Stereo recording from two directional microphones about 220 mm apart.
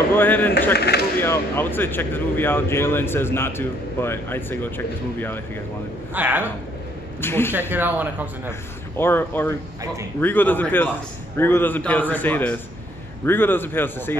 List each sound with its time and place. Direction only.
0.1 s speech: 10° left (ahead or behind)
0.7 s speech: 50° left (ahead or behind)
1.2 s speech: 10° left (ahead or behind)
6.1 s speech: 10° right (ahead or behind)
7.2 s speech: 10° left (ahead or behind)
7.7 s speech: 10° right (ahead or behind)
8.9 s speech: 10° left (ahead or behind)